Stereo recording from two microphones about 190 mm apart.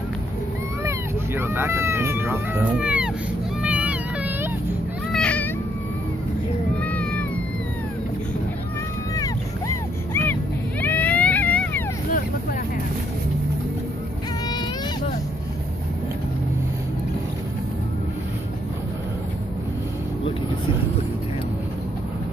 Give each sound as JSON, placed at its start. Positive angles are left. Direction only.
{"t": 0.8, "sound": "cat", "side_deg": -10}
{"t": 3.6, "sound": "meow", "side_deg": -5}
{"t": 5.1, "sound": "a sound", "side_deg": 5}
{"t": 6.8, "sound": "cat", "side_deg": 5}
{"t": 9.1, "sound": "vehicle", "side_deg": 15}